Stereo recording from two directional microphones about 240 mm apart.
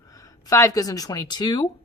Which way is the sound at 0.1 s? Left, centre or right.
Centre.